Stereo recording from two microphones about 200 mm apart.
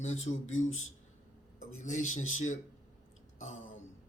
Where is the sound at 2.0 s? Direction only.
90° left.